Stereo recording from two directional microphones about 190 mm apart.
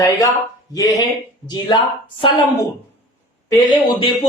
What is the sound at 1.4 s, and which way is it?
Speech, 25° left (ahead or behind).